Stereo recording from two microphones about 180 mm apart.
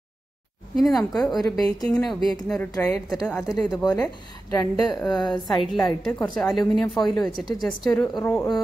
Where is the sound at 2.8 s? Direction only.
Centre (ahead or behind).